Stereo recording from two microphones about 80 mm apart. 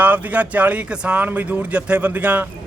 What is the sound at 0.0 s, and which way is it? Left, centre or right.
A man's voice, centre.